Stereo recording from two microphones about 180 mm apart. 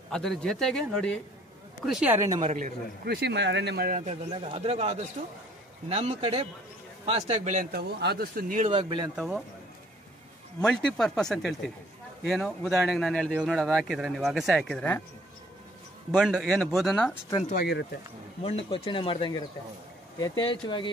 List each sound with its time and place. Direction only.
0.1 s speech: 5° left (ahead or behind)
1.9 s speech: 5° right (ahead or behind)
2.4 s a man's voice: 45° right (ahead or behind)
4.4 s speech: 35° right (ahead or behind)
7.7 s a man's voice: 60° right (ahead or behind)
8.6 s speech: 30° right (ahead or behind)
9.1 s speech: 5° right (ahead or behind)
10.6 s speech: 5° left (ahead or behind)
16.2 s speech: centre (ahead or behind)
18.4 s speech: 30° left (ahead or behind)